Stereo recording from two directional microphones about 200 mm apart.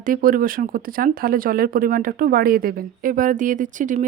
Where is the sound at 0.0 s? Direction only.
45° right (ahead or behind).